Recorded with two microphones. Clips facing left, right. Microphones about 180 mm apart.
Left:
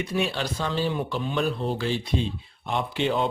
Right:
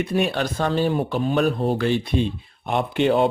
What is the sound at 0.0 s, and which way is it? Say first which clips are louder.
Speech: right 5 dB; 55° right (ahead or behind).